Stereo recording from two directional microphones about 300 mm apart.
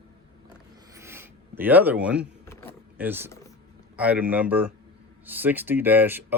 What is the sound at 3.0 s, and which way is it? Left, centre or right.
Speech, centre.